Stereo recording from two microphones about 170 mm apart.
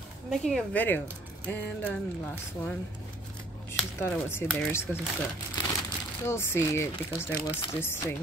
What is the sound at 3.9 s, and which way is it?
Speech, 15° left (ahead or behind).